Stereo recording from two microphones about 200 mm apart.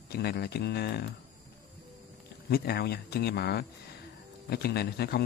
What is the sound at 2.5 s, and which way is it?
Speech, 50° left (ahead or behind).